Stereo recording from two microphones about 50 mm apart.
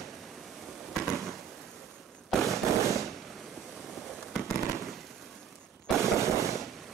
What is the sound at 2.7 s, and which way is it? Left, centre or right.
Fireworks, right.